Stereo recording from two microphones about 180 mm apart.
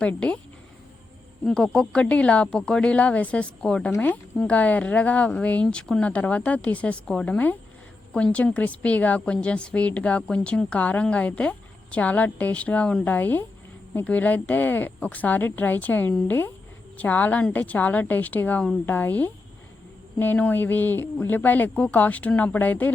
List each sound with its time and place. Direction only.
0.0 s a woman's voice: 10° left (ahead or behind)
1.5 s a woman's voice: 5° left (ahead or behind)